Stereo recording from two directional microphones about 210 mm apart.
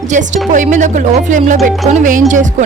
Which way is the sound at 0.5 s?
35° right (ahead or behind).